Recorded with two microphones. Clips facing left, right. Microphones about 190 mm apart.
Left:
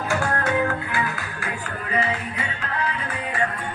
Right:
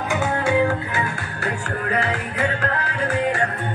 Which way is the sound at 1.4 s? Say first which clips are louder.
Right 8 dB; 65° right (ahead or behind).